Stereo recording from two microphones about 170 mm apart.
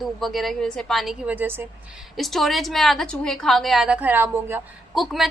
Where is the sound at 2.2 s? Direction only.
Centre (ahead or behind).